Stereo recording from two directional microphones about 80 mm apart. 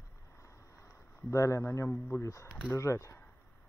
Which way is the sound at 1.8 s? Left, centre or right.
Left.